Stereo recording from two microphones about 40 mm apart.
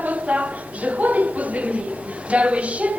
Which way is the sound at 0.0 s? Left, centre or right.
Right.